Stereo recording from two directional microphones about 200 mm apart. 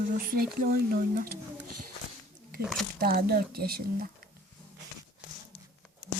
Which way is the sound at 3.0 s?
50° right (ahead or behind).